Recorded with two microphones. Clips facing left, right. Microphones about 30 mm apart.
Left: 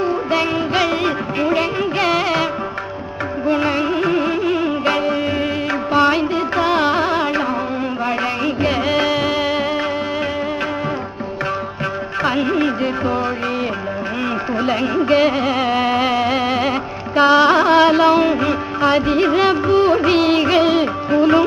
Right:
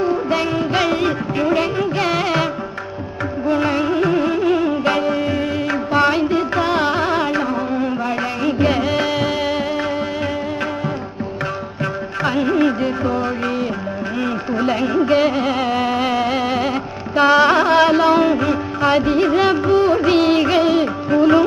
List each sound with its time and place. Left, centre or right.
0.0 s music: centre
12.2 s music: centre
14.6 s music: centre
19.8 s music: centre
20.1 s music of bollywood: centre
20.7 s music: centre